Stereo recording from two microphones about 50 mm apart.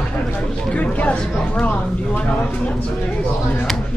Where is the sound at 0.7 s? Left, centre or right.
Left.